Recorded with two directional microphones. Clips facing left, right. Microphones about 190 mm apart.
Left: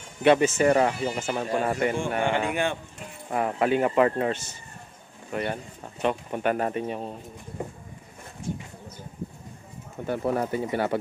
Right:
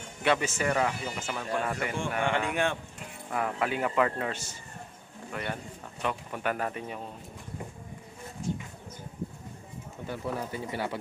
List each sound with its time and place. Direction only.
0.2 s speech: 20° left (ahead or behind)
0.6 s speech: 35° left (ahead or behind)
2.5 s speech: centre (ahead or behind)
3.3 s speech: 30° left (ahead or behind)
10.0 s speech: 55° left (ahead or behind)